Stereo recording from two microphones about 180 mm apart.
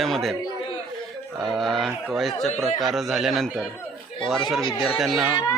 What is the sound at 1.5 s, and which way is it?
Speech, centre (ahead or behind).